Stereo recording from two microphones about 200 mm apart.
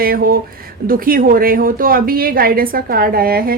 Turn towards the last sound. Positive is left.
turn(degrees=-50)  # may be behind; listen again after turning